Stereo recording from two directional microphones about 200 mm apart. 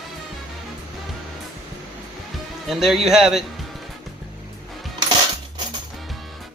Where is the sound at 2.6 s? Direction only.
Centre (ahead or behind).